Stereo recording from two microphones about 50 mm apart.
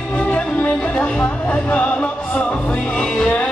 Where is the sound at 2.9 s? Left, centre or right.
Centre.